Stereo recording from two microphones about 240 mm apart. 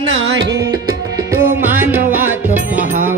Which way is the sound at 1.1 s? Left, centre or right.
Centre.